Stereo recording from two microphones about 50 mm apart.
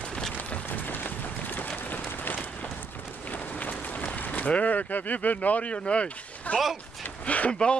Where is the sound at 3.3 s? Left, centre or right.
Left.